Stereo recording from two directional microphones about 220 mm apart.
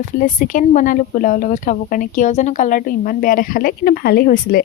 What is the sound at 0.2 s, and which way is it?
Speech, 35° left (ahead or behind).